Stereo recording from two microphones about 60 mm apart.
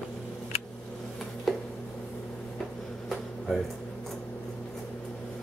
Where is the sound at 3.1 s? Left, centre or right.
Centre.